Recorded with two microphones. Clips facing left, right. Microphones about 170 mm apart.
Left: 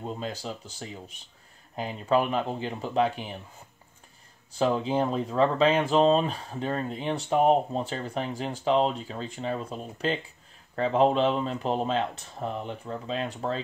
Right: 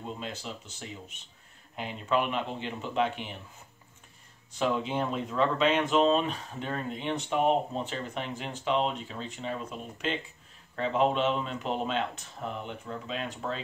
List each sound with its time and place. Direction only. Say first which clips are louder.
0.0 s speech: left 4 dB; 40° left (ahead or behind)
4.6 s speech: left 4 dB; 35° left (ahead or behind)